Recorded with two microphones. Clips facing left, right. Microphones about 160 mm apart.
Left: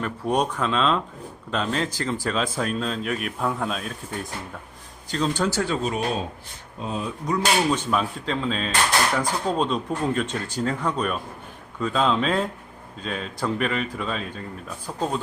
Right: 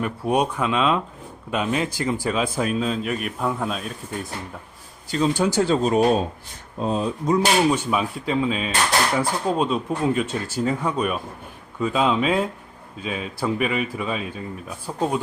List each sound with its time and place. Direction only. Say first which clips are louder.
0.0 s a man's voice: right 2 dB; 10° right (ahead or behind)
5.6 s speech: right 7 dB; 35° right (ahead or behind)
7.7 s speech: right 1 dB; 10° right (ahead or behind)